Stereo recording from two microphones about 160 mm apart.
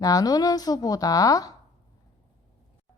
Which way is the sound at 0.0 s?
20° left (ahead or behind).